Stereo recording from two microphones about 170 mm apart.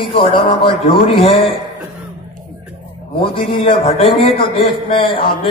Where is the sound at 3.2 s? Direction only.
30° left (ahead or behind).